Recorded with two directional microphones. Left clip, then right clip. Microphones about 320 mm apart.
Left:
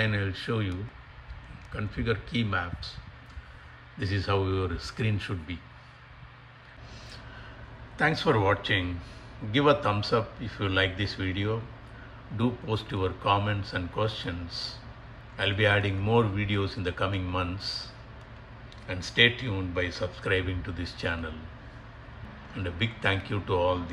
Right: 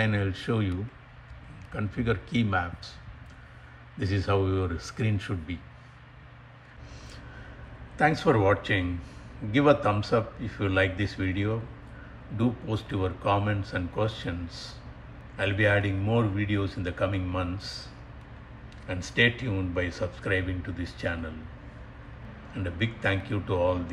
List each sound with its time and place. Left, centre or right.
0.0 s a man's voice: centre
4.0 s a man's voice: centre
8.2 s a man's voice: centre
15.3 s a man's voice: centre
18.9 s a man's voice: centre
22.6 s a man's voice: centre